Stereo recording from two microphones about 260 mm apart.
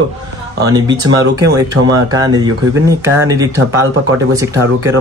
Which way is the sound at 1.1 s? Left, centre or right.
Right.